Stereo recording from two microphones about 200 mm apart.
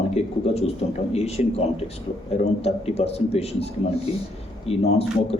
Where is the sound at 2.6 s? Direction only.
30° left (ahead or behind).